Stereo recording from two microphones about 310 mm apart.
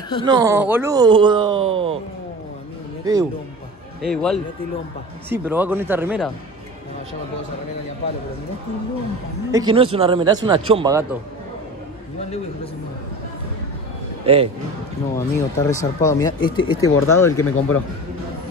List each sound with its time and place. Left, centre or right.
0.2 s speech: centre
3.1 s speech: centre
4.0 s speech: centre
9.5 s speech: centre
14.2 s a man's voice: centre
15.1 s speech: centre